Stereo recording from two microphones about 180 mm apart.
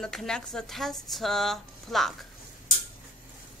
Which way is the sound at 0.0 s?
Centre (ahead or behind).